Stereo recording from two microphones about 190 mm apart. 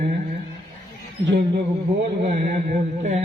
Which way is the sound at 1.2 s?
65° right (ahead or behind).